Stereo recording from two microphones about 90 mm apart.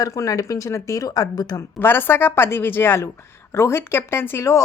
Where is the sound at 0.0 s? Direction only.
40° left (ahead or behind).